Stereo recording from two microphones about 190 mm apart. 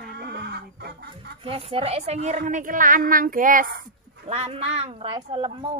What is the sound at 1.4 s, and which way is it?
Speech, 30° right (ahead or behind).